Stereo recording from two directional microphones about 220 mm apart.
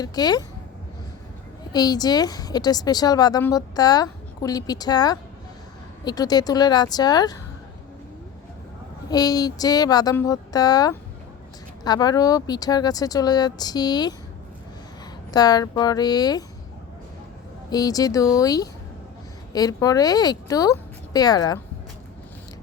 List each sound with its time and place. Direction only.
0.0 s a woman's voice: 20° left (ahead or behind)
1.7 s a woman's voice: 20° left (ahead or behind)
9.0 s a woman's voice: 15° left (ahead or behind)
15.3 s a woman's voice: 15° left (ahead or behind)
17.7 s a woman's voice: 15° left (ahead or behind)